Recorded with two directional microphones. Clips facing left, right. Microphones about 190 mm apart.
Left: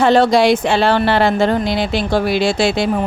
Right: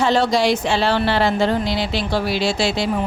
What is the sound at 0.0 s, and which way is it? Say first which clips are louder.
Speech: left 5 dB; 55° left (ahead or behind).